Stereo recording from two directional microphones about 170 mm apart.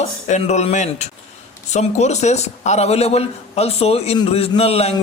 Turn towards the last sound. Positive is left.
turn(degrees=35)  # may be behind; listen again after turning